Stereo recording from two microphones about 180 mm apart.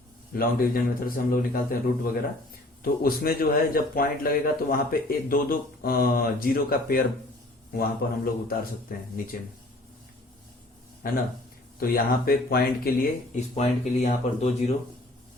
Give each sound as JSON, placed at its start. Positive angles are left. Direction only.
{"t": 0.3, "sound": "a man's voice", "side_deg": 55}
{"t": 2.8, "sound": "a man's voice", "side_deg": 55}
{"t": 11.0, "sound": "a man's voice", "side_deg": 50}
{"t": 13.6, "sound": "speech", "side_deg": 40}